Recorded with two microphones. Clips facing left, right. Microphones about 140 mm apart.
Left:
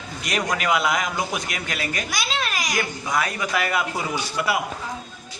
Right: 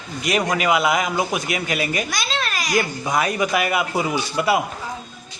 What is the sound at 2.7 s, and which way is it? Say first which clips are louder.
A man's voice: right 6 dB; 25° right (ahead or behind).